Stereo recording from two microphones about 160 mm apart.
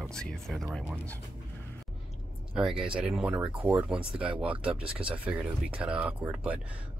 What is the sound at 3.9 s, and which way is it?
Speech, 35° right (ahead or behind).